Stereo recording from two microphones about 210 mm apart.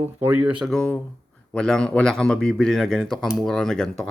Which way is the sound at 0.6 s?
5° left (ahead or behind).